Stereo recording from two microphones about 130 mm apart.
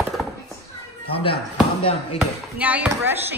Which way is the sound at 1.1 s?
45° left (ahead or behind).